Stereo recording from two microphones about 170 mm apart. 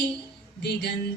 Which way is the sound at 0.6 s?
75° left (ahead or behind).